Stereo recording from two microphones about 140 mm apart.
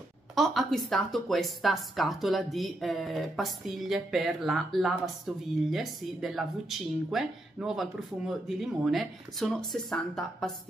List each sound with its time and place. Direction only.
0.4 s speech: centre (ahead or behind)